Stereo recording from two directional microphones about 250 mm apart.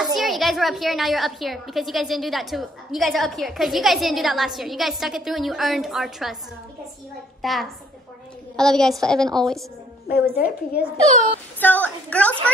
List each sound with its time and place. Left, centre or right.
0.0 s a woman's voice: centre
7.4 s a woman's voice: centre
10.3 s a woman's voice: left
11.6 s a woman's voice: centre